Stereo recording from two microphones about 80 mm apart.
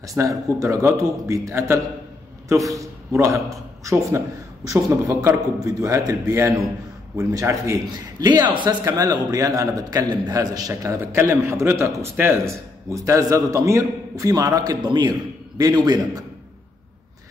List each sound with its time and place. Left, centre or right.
0.1 s a man's voice: right
8.2 s a man's voice: right
8.8 s a man's voice: right
10.8 s a man's voice: right
15.6 s a man's voice: right